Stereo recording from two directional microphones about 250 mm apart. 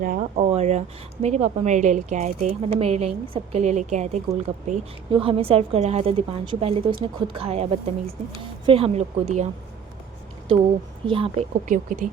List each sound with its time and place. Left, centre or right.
0.0 s a woman's voice: right
11.0 s a woman's voice: right